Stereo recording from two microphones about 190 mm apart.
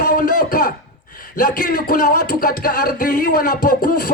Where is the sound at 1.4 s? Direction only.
45° left (ahead or behind).